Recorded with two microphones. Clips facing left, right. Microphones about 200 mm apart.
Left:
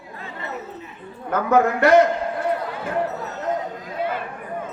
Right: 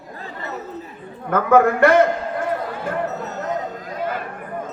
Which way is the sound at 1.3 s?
55° right (ahead or behind).